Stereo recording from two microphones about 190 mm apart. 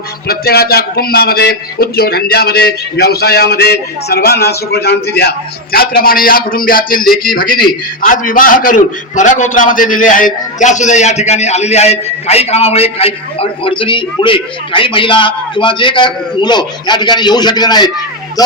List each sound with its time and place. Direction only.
0.3 s a man's voice: 55° left (ahead or behind); by 18.5 s 20° left (ahead or behind)